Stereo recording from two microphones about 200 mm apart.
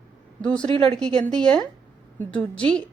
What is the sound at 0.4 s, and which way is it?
A woman's voice, 5° left (ahead or behind).